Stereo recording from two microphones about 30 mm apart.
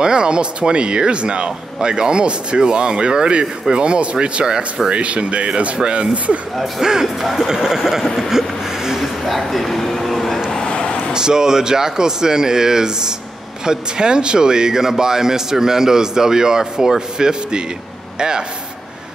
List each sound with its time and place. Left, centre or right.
0.0 s speech: right
6.8 s a man's voice: centre
8.3 s vehicle: centre
9.0 s a sound: centre
10.7 s a sound: left
11.1 s a man's voice: right